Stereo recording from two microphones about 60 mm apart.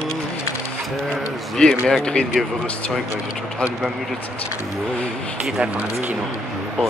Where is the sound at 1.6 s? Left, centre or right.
Centre.